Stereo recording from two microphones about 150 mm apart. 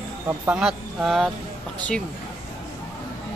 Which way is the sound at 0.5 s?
5° right (ahead or behind).